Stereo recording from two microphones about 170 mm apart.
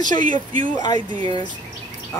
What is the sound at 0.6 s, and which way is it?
Speech, 25° left (ahead or behind).